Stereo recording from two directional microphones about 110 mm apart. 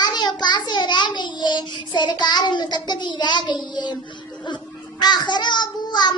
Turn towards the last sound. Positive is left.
turn(degrees=40)  # may be behind; listen again after turning